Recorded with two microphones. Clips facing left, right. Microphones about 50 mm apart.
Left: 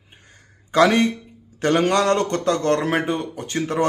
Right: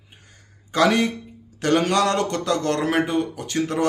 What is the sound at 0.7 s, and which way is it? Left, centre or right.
Speech, left.